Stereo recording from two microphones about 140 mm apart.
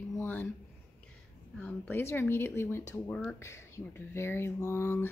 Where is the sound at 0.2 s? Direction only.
15° left (ahead or behind).